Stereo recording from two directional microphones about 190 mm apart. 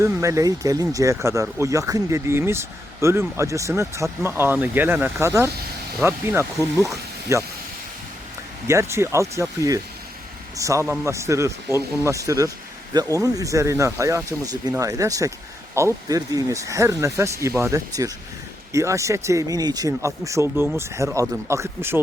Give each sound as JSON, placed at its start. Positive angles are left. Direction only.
{"t": 0.0, "sound": "speech", "side_deg": -15}
{"t": 8.6, "sound": "speech", "side_deg": -15}